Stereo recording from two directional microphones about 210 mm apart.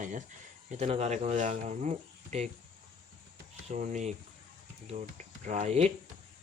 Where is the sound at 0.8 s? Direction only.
30° right (ahead or behind).